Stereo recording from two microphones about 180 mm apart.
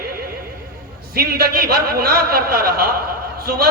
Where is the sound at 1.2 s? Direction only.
60° right (ahead or behind).